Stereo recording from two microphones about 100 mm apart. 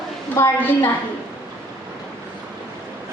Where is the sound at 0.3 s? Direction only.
25° left (ahead or behind).